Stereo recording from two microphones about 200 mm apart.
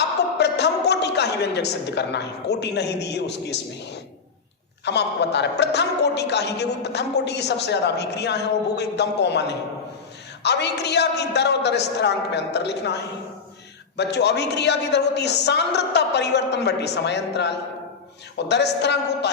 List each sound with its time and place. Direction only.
0.3 s a man's voice: 55° left (ahead or behind)
4.9 s a woman's voice: 60° left (ahead or behind)